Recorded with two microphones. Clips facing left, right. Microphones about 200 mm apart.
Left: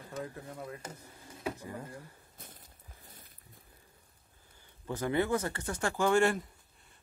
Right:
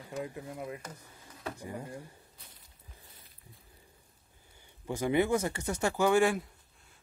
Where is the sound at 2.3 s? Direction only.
50° left (ahead or behind).